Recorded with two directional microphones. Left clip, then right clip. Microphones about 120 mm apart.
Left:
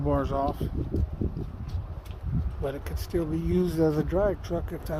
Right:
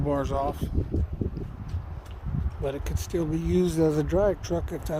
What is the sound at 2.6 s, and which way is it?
Speech, 45° right (ahead or behind).